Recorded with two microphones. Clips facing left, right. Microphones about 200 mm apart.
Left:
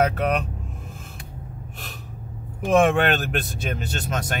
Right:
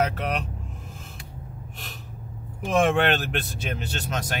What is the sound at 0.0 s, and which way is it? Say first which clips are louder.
Speech: left 4 dB; 50° left (ahead or behind).